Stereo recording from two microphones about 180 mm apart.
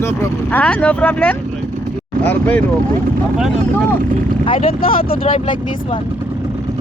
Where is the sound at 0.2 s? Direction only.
10° left (ahead or behind).